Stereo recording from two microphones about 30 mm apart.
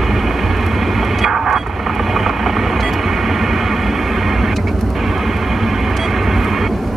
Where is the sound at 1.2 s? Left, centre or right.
Centre.